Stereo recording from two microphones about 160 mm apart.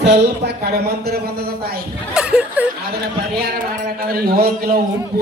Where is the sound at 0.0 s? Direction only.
90° right.